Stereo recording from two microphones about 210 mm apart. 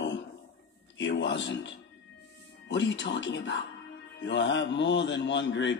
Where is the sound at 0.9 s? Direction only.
60° left (ahead or behind).